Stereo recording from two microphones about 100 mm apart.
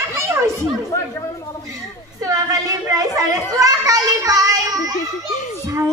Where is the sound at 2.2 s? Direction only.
35° right (ahead or behind).